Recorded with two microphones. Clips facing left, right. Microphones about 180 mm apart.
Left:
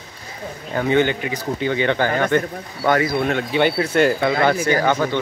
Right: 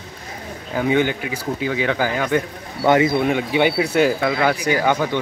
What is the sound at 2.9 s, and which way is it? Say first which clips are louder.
Speech: right 3 dB; 20° right (ahead or behind).